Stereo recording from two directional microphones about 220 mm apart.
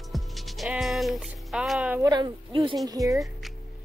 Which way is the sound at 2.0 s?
20° right (ahead or behind).